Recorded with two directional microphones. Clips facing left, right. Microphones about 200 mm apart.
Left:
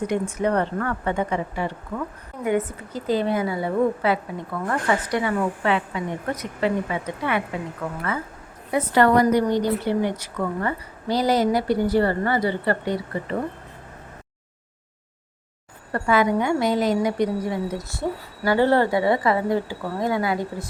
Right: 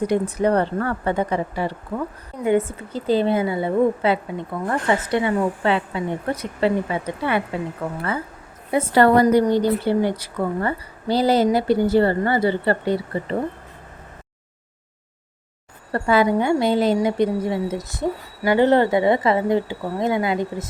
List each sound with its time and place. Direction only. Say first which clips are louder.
0.1 s a woman's voice: right 3 dB; 35° right (ahead or behind)
15.9 s a woman's voice: right 2 dB; 30° right (ahead or behind)